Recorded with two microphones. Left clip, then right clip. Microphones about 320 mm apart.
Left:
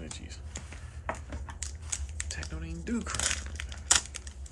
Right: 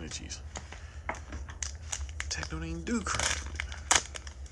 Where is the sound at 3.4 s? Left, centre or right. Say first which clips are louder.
Even; centre.